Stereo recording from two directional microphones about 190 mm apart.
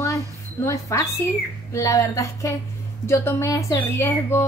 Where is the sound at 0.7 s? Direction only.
15° left (ahead or behind).